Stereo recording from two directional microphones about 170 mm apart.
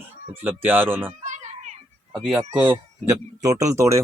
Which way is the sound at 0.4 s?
10° right (ahead or behind).